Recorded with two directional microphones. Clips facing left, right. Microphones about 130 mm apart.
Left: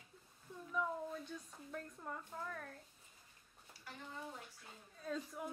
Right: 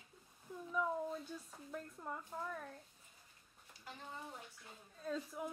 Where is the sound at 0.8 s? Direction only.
10° right (ahead or behind).